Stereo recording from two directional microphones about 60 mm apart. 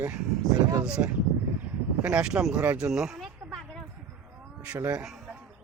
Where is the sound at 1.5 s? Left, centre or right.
Right; by 3.8 s centre.